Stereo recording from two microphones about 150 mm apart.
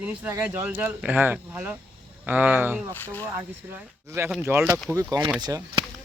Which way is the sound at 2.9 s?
15° left (ahead or behind).